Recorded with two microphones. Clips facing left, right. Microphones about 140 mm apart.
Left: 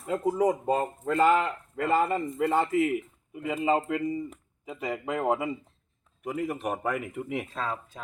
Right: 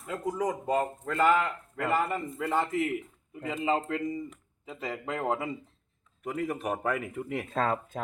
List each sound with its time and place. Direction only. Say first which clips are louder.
0.0 s speech: left 5 dB; 30° left (ahead or behind)
0.4 s speech: left 1 dB; 20° left (ahead or behind)
7.5 s speech: right 5 dB; 55° right (ahead or behind)